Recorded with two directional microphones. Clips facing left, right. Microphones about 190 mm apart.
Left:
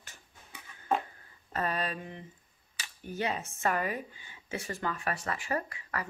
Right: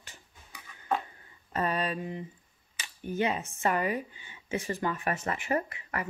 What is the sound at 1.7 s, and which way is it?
Speech, 40° left (ahead or behind).